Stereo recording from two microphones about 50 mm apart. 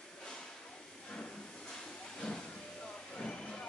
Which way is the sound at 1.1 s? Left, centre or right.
Left.